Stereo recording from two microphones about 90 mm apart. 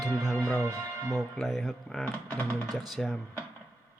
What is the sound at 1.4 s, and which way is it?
Speech, 5° right (ahead or behind).